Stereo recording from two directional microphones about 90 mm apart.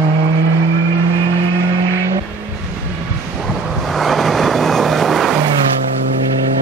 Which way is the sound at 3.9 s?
Centre (ahead or behind).